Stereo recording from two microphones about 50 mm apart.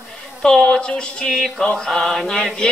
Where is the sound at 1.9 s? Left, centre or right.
Centre.